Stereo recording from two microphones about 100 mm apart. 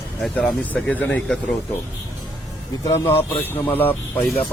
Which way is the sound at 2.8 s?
25° left (ahead or behind).